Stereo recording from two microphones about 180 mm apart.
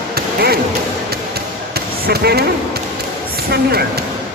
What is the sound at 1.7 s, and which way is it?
Basketball bounce, 60° right (ahead or behind).